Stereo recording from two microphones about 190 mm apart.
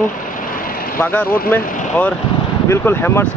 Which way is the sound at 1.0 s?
10° left (ahead or behind).